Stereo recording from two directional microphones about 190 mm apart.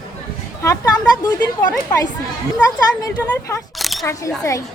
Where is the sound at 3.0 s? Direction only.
15° left (ahead or behind).